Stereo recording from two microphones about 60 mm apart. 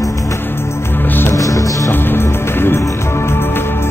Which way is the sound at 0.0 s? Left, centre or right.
Left.